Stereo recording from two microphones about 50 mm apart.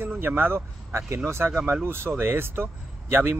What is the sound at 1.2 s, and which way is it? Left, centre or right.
Speech, right.